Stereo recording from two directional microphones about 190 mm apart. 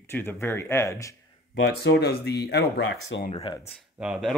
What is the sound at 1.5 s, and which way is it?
Speech, 60° left (ahead or behind).